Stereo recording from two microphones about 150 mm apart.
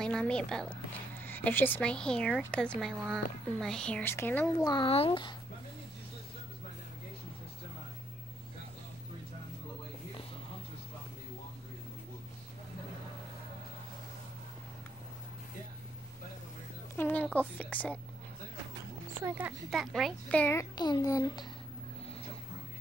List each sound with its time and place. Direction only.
0.0 s speech: 5° left (ahead or behind)
4.6 s a child's voice: 30° left (ahead or behind)
16.9 s a woman's voice: 10° left (ahead or behind)
19.2 s speech: 10° right (ahead or behind)
19.7 s a child's voice: centre (ahead or behind)
20.7 s a child's voice: 30° left (ahead or behind)